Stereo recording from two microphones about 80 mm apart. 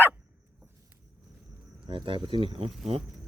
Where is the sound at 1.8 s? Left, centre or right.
Right.